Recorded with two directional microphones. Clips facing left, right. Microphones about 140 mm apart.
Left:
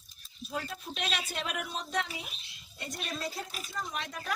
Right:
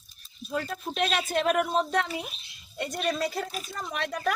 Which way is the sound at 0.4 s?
50° right (ahead or behind).